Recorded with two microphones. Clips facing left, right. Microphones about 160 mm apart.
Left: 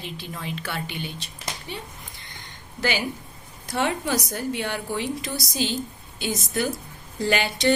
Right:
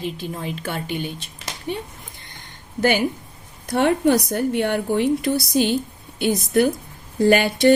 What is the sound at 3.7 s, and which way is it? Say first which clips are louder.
A woman's voice: right 8 dB; 55° right (ahead or behind).